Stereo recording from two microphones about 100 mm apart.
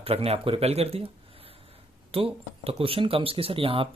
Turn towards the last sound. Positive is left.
turn(degrees=-65)  # may be behind; listen again after turning